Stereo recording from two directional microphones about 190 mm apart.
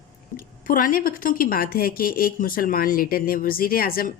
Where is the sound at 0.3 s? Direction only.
45° left (ahead or behind).